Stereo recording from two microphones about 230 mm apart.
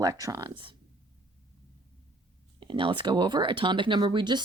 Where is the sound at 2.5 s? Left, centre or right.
Right.